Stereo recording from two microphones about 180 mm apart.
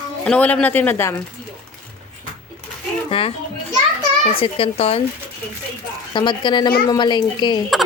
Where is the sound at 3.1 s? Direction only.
30° left (ahead or behind).